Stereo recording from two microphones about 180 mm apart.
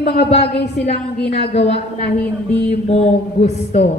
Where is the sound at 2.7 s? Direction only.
35° left (ahead or behind).